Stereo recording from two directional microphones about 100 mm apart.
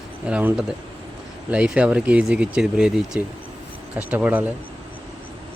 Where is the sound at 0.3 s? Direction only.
10° right (ahead or behind).